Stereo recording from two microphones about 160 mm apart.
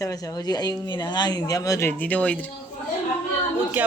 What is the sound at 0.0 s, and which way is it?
Speech, 25° left (ahead or behind).